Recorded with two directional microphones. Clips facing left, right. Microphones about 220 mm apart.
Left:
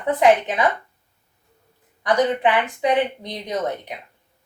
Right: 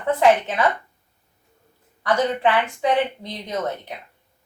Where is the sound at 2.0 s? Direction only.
15° left (ahead or behind).